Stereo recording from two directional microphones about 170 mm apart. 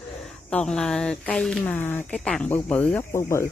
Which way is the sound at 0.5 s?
5° left (ahead or behind).